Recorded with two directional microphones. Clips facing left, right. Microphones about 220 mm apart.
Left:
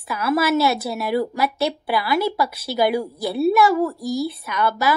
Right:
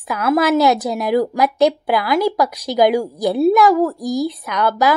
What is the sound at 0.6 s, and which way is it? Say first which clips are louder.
Speech: right 5 dB; 20° right (ahead or behind).